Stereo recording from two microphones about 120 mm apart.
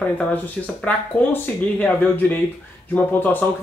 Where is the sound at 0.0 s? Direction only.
10° left (ahead or behind).